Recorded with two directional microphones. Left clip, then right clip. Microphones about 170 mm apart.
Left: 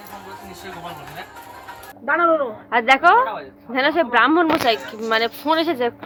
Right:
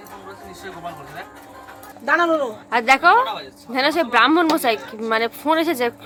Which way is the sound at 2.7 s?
15° right (ahead or behind).